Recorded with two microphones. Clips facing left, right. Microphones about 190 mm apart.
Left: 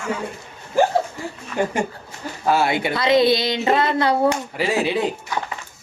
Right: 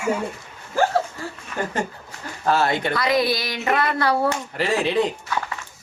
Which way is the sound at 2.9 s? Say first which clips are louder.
Left 9 dB; 25° left (ahead or behind).